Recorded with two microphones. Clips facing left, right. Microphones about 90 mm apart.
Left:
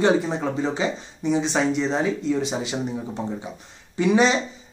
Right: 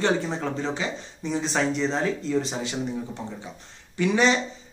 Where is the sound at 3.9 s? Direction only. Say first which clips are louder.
Left 3 dB; 15° left (ahead or behind).